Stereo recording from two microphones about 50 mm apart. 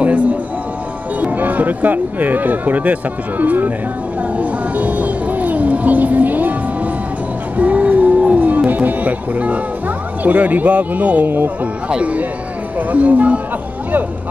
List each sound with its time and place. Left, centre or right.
0.0 s a sound: right
1.2 s speech: right
7.5 s music: right
10.2 s speech: right
11.2 s speech: right
11.9 s speech: right